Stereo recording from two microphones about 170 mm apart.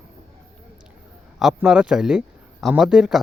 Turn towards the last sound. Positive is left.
turn(degrees=-5)  # may be behind; listen again after turning